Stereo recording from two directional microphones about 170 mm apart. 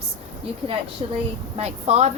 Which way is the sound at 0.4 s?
35° right (ahead or behind).